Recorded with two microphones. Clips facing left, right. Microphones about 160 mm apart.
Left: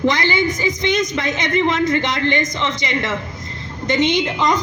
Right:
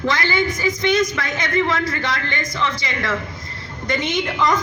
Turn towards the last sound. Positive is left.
turn(degrees=20)  # may be behind; listen again after turning